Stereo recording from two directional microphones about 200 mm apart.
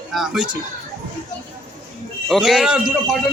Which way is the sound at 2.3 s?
Centre (ahead or behind).